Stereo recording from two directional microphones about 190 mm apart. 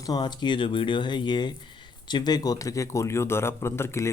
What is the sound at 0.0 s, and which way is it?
Speech, 20° left (ahead or behind).